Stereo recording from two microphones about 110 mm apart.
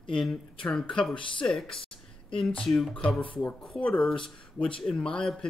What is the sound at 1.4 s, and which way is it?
Speech, 5° left (ahead or behind).